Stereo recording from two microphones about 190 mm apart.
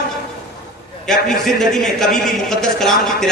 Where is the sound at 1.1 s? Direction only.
Centre (ahead or behind).